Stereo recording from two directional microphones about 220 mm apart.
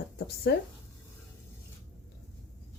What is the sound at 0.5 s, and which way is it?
Speech, 50° left (ahead or behind).